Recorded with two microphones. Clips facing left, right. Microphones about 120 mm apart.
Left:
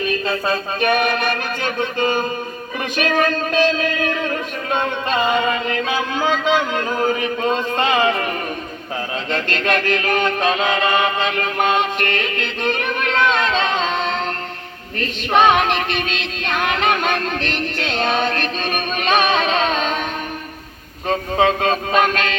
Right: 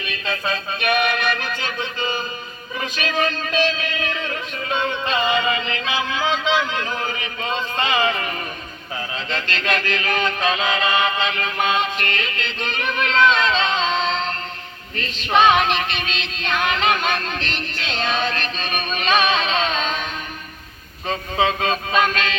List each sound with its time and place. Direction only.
0.0 s music: 40° left (ahead or behind)
14.9 s female singing: 50° left (ahead or behind)
21.1 s music: 55° left (ahead or behind)